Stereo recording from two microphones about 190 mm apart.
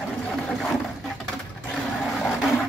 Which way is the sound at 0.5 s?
Centre (ahead or behind).